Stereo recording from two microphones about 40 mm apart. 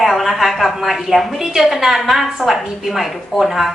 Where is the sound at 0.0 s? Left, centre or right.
Centre.